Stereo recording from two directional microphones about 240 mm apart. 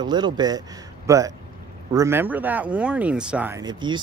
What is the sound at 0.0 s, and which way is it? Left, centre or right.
Speech, centre.